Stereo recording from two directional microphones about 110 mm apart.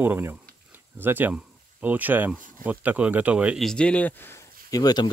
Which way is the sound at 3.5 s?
5° left (ahead or behind).